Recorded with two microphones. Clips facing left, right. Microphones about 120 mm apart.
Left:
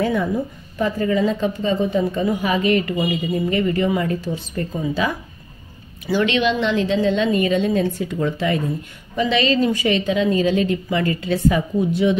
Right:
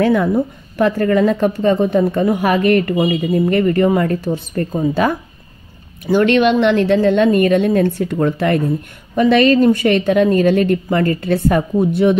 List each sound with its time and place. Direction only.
0.0 s speech: 70° right (ahead or behind); by 12.2 s 55° right (ahead or behind)